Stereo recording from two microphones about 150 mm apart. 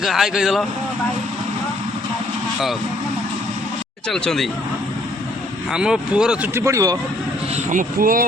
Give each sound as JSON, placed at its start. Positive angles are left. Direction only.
{"t": 0.0, "sound": "speech", "side_deg": 0}
{"t": 4.1, "sound": "speech", "side_deg": 5}
{"t": 5.7, "sound": "speech", "side_deg": -5}
{"t": 7.5, "sound": "speech", "side_deg": -60}